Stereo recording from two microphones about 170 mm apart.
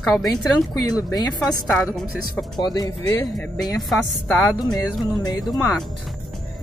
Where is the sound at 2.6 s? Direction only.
25° left (ahead or behind).